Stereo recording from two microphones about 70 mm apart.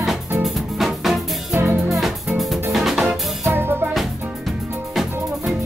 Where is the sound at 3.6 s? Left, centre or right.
Right.